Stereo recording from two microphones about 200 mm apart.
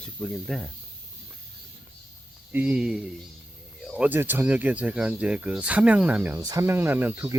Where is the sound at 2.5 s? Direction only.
5° right (ahead or behind).